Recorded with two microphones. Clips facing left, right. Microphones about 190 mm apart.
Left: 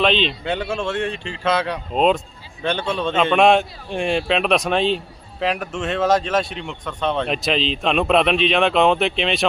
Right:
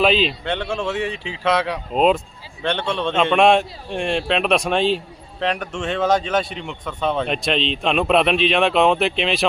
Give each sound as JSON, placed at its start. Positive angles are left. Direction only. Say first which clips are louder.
{"t": 0.0, "sound": "a man's voice", "louder": "right 1 dB", "side_deg": -5}